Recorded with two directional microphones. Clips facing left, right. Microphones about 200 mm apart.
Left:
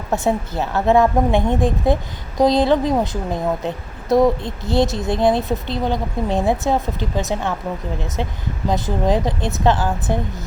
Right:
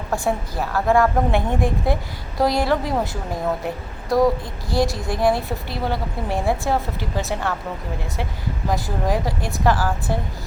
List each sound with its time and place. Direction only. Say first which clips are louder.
0.1 s a woman's voice: left 4 dB; 20° left (ahead or behind)
8.7 s a woman's voice: left 4 dB; 20° left (ahead or behind)